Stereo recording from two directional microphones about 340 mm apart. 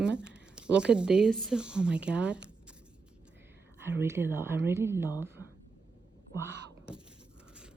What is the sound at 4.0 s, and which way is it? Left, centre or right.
Speech, centre.